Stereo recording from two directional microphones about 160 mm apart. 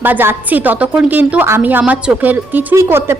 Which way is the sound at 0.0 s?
15° right (ahead or behind).